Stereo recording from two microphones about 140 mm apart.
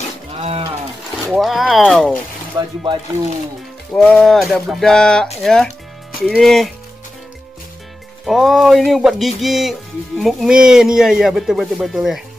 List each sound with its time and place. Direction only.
0.4 s cattle: 45° right (ahead or behind)
1.3 s speech: centre (ahead or behind)
2.6 s speech: 30° right (ahead or behind)
3.9 s speech: 10° left (ahead or behind)
8.3 s speech: centre (ahead or behind)